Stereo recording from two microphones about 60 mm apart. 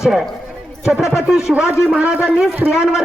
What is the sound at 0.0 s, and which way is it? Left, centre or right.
A man's voice, centre.